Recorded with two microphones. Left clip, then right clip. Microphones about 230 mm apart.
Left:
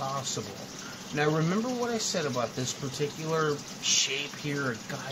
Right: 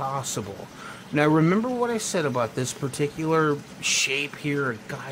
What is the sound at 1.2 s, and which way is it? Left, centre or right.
Speech, right.